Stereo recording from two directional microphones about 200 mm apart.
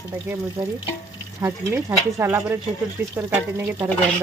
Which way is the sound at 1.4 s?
10° right (ahead or behind).